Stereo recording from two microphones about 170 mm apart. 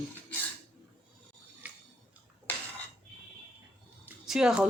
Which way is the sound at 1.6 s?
10° right (ahead or behind).